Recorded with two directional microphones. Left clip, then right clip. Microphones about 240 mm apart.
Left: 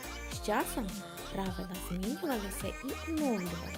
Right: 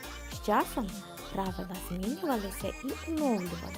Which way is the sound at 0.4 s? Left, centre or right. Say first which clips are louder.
Right 4 dB; centre.